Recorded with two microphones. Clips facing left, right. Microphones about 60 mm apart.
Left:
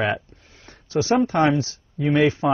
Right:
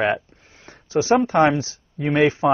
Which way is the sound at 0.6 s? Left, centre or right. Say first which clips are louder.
Right 2 dB; right.